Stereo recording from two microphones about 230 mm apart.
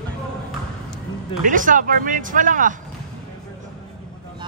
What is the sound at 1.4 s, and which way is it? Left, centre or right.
Speech, right.